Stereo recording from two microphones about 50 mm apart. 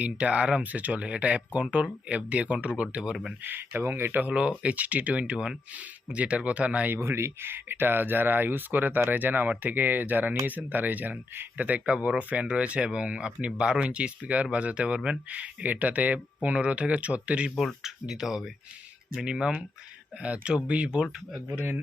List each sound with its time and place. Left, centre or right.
0.0 s speech: right
0.6 s speech: right
3.4 s speech: right
4.3 s speech: right
6.9 s speech: right
18.1 s speech: centre